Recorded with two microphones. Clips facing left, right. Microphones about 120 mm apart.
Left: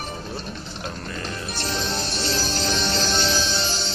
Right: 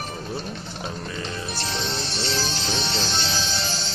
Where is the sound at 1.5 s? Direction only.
45° left (ahead or behind).